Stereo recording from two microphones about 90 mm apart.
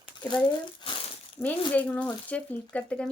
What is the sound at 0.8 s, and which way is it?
Speech, 55° left (ahead or behind).